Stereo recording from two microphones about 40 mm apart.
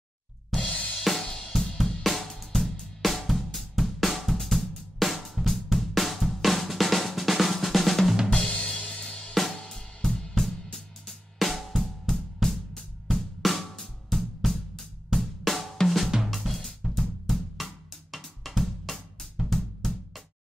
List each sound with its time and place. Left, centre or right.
0.6 s drum kit: left
1.2 s cymbal: centre
2.0 s music: centre
8.5 s drum kit: left
9.3 s drum kit: centre
10.4 s music: centre
14.1 s drum: centre
16.3 s drum kit: centre
18.1 s drum: centre